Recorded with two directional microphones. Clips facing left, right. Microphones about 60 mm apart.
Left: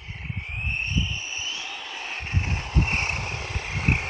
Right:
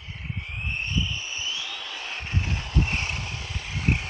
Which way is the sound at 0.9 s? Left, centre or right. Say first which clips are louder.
Even; left.